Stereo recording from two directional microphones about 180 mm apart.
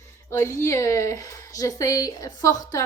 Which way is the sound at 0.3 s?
15° left (ahead or behind).